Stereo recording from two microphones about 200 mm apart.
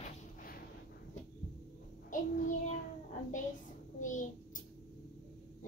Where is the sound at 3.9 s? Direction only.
40° left (ahead or behind).